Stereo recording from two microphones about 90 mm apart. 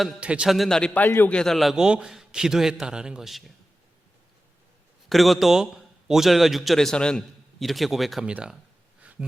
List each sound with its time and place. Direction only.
0.2 s a man's voice: 10° right (ahead or behind)
0.5 s a man's voice: 5° left (ahead or behind)
1.0 s a man's voice: 20° left (ahead or behind)
1.3 s a man's voice: 5° left (ahead or behind)
1.7 s a man's voice: 10° right (ahead or behind)
5.0 s a man's voice: centre (ahead or behind)
8.2 s a man's voice: 15° right (ahead or behind)